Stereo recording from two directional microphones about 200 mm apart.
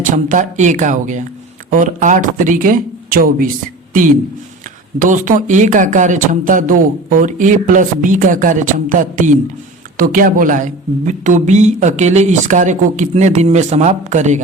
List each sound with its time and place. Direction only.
0.1 s speech: 40° right (ahead or behind)
4.9 s speech: 40° right (ahead or behind)